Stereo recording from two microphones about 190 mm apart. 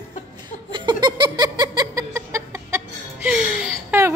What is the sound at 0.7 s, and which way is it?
Giggle, 25° right (ahead or behind).